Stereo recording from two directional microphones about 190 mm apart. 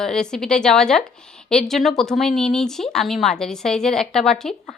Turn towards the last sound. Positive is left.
turn(degrees=0)  # may be behind; listen again after turning